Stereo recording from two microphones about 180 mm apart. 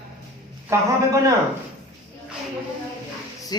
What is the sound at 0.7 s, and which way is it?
Speech, 15° right (ahead or behind).